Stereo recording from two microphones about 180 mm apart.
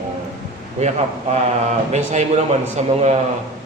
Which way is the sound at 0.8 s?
40° right (ahead or behind).